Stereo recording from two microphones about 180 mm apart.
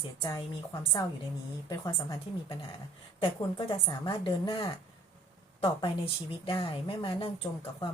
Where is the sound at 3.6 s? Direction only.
30° left (ahead or behind).